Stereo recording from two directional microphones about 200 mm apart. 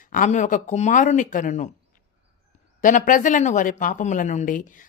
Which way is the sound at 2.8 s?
40° left (ahead or behind).